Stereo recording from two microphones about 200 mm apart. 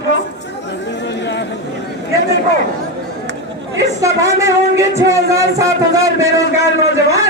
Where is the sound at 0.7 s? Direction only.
60° left (ahead or behind).